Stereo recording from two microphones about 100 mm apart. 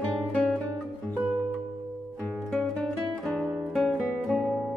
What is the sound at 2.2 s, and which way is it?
Music, 10° left (ahead or behind).